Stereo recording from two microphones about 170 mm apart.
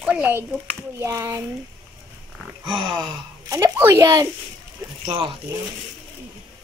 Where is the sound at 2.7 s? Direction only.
30° right (ahead or behind).